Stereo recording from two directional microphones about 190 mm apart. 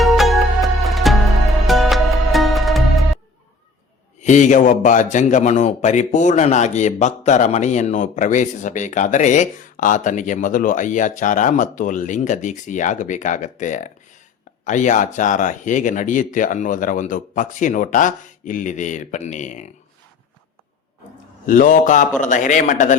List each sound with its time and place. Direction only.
0.0 s music: centre (ahead or behind)
4.2 s a man's voice: 40° left (ahead or behind)
21.4 s a man's voice: 45° left (ahead or behind)